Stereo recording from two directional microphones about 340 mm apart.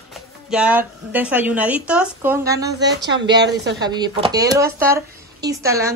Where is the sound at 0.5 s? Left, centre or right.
Centre.